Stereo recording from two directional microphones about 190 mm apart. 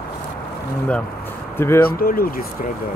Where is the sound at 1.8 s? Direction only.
50° left (ahead or behind).